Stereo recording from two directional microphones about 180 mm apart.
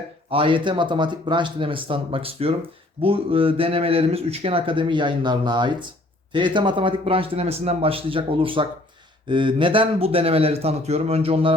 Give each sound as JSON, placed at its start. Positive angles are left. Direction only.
{"t": 0.3, "sound": "speech", "side_deg": -30}